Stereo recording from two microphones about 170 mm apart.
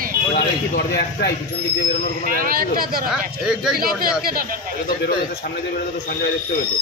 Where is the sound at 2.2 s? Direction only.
55° right (ahead or behind).